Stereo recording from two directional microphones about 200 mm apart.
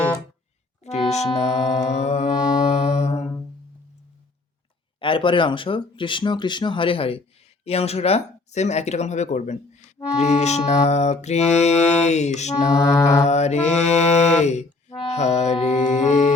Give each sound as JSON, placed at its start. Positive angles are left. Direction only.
{"t": 0.9, "sound": "music", "side_deg": 35}
{"t": 4.9, "sound": "speech", "side_deg": 25}
{"t": 7.6, "sound": "music", "side_deg": 30}
{"t": 12.7, "sound": "mantra", "side_deg": 15}
{"t": 13.2, "sound": "music", "side_deg": 35}